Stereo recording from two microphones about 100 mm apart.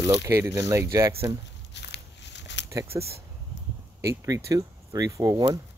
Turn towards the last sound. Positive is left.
turn(degrees=-35)  # may be behind; listen again after turning